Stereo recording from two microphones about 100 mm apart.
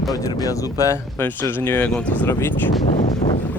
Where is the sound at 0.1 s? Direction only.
40° left (ahead or behind).